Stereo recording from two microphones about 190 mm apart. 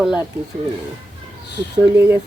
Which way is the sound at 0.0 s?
5° right (ahead or behind).